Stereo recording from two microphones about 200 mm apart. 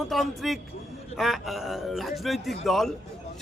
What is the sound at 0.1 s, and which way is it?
A man's voice, centre (ahead or behind).